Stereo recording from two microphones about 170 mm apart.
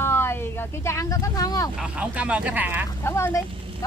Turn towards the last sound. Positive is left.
turn(degrees=15)  # may be behind; listen again after turning